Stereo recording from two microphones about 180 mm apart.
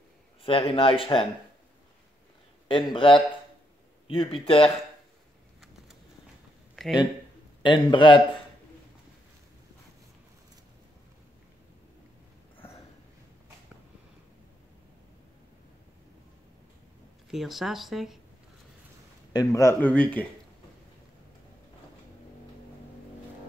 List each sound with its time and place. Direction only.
0.4 s speech: 30° left (ahead or behind)
2.7 s speech: 30° left (ahead or behind)
6.7 s a sound: centre (ahead or behind)
7.6 s speech: 25° left (ahead or behind)
17.3 s speech: centre (ahead or behind)
19.3 s speech: 15° left (ahead or behind)